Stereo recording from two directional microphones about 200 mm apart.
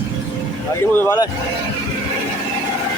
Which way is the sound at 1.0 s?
15° left (ahead or behind).